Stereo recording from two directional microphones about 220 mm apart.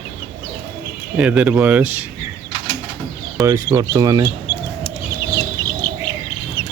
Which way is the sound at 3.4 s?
15° right (ahead or behind).